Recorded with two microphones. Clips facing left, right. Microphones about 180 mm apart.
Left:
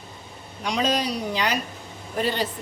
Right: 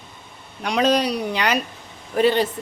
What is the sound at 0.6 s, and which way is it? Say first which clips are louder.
Speech: right 5 dB; 60° right (ahead or behind).